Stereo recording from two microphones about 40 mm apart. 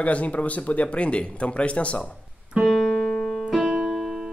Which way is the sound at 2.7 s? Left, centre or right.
Centre.